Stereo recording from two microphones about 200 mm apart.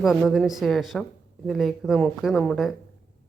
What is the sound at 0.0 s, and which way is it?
Speech, centre (ahead or behind).